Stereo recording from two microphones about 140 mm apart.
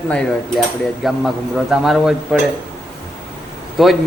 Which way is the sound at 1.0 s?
Centre (ahead or behind).